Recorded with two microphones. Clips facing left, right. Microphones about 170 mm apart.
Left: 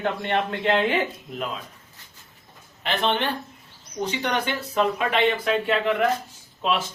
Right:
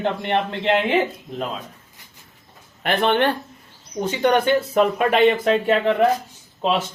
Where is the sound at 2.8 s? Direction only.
55° right (ahead or behind).